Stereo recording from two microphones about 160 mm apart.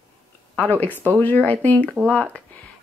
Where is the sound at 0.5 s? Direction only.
10° left (ahead or behind).